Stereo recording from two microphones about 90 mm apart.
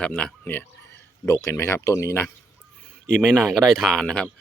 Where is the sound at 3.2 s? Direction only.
5° left (ahead or behind).